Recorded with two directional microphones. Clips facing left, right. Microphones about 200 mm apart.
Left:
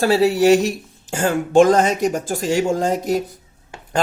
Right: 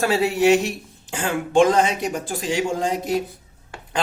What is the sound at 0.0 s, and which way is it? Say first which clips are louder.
A man's voice: left 4 dB; 35° left (ahead or behind).